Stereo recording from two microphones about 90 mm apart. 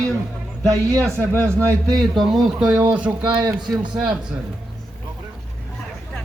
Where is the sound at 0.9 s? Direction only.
30° right (ahead or behind).